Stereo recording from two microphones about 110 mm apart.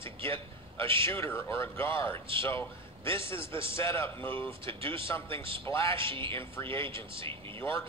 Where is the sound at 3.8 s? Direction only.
20° left (ahead or behind).